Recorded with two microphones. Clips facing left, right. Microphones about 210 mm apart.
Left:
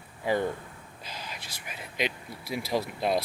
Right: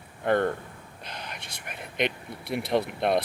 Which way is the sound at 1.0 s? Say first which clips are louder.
Right 1 dB; 60° right (ahead or behind).